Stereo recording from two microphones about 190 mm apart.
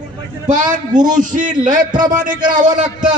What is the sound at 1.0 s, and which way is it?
A man's voice, 45° right (ahead or behind).